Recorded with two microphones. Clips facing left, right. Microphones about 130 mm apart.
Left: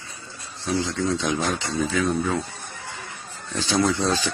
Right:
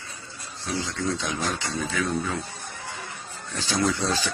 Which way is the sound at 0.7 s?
20° left (ahead or behind).